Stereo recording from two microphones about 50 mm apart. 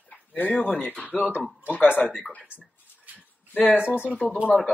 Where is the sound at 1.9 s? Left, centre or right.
Right.